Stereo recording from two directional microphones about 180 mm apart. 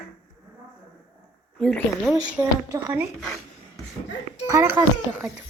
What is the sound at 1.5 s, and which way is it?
Speech, 5° left (ahead or behind).